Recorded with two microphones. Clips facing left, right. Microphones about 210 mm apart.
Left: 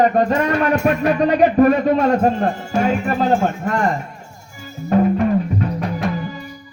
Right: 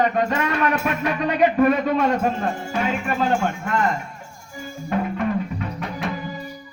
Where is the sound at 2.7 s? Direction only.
40° left (ahead or behind).